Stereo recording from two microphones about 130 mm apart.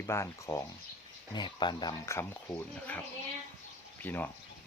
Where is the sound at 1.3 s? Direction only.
35° left (ahead or behind).